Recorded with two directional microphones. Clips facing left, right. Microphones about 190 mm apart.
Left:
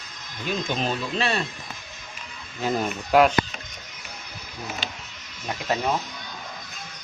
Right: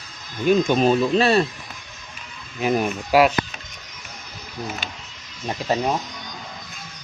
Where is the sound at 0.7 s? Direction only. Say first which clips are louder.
Right 10 dB; 45° right (ahead or behind).